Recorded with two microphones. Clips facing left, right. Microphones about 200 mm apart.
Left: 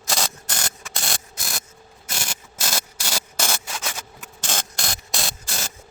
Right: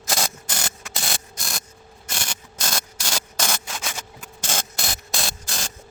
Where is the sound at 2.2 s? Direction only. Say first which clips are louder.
Even; 5° left (ahead or behind).